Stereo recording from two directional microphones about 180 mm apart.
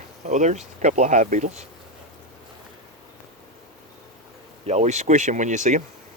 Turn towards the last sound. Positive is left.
turn(degrees=-40)  # may be behind; listen again after turning